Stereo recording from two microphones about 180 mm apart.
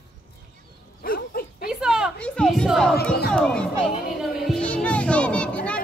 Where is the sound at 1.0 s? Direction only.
55° left (ahead or behind).